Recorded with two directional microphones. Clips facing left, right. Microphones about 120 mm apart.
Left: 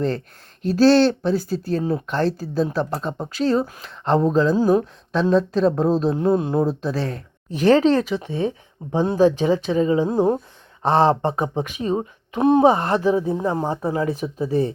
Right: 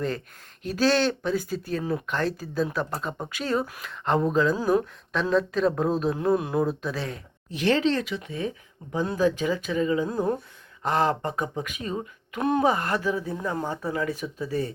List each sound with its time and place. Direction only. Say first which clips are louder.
0.6 s speech: left 8 dB; 35° left (ahead or behind)
12.6 s speech: left 7 dB; 35° left (ahead or behind)